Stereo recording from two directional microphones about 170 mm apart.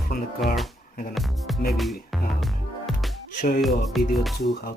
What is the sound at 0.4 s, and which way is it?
Music, centre (ahead or behind).